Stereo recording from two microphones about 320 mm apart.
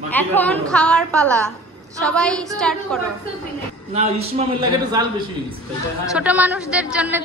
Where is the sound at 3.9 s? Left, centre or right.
Centre.